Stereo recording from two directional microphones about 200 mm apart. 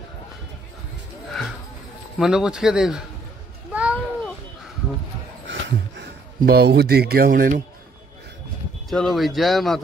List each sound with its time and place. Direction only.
1.3 s clip-clop: centre (ahead or behind)
2.1 s speech: 5° right (ahead or behind)
3.7 s a sound: 5° right (ahead or behind)
5.5 s a sound: 70° right (ahead or behind)
6.4 s speech: 50° right (ahead or behind)
8.9 s speech: centre (ahead or behind)